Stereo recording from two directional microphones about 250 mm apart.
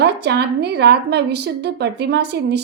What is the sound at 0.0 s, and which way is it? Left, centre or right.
A woman's voice, right.